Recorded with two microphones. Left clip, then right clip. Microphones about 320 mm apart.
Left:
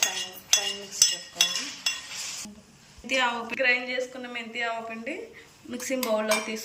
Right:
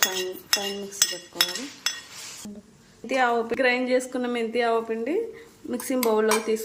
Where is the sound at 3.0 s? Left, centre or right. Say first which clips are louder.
Right 4 dB; centre.